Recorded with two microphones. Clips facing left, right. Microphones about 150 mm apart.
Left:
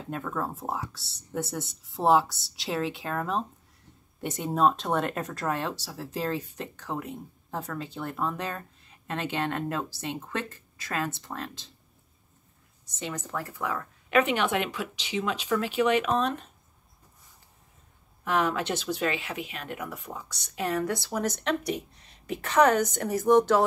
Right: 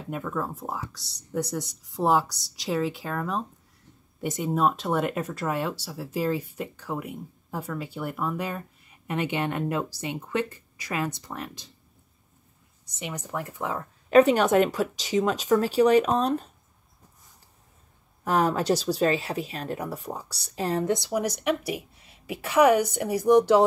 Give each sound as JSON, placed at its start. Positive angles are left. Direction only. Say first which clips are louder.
{"t": 0.1, "sound": "speech", "louder": "right 2 dB", "side_deg": 0}
{"t": 13.0, "sound": "speech", "louder": "right 1 dB", "side_deg": -15}
{"t": 14.0, "sound": "speech", "louder": "right 7 dB", "side_deg": -35}
{"t": 18.2, "sound": "speech", "louder": "right 3 dB", "side_deg": -40}